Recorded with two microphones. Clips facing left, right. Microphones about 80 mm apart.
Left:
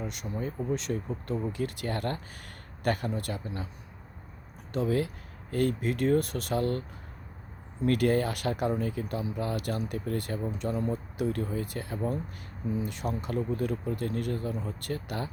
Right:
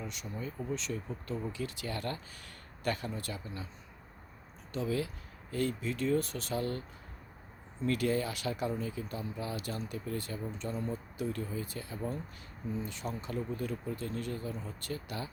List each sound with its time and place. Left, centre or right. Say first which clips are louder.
0.0 s speech: left 6 dB; left
4.7 s speech: left 6 dB; left